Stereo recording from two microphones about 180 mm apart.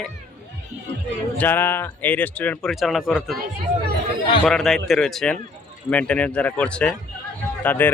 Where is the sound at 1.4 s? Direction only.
10° left (ahead or behind).